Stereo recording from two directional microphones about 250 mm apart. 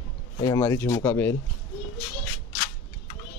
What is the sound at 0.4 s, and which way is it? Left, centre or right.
Speech, centre.